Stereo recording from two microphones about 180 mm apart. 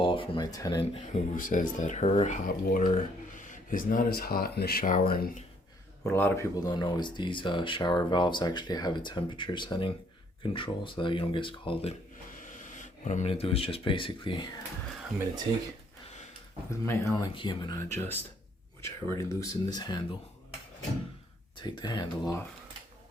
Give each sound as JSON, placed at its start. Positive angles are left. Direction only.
{"t": 0.0, "sound": "speech", "side_deg": 30}
{"t": 0.9, "sound": "speech", "side_deg": 45}
{"t": 6.1, "sound": "speech", "side_deg": 15}
{"t": 12.4, "sound": "speech", "side_deg": 45}
{"t": 16.8, "sound": "speech", "side_deg": 15}
{"t": 17.3, "sound": "speech", "side_deg": 25}
{"t": 21.6, "sound": "speech", "side_deg": 25}